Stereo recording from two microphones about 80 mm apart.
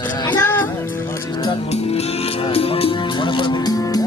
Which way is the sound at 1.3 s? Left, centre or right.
Left.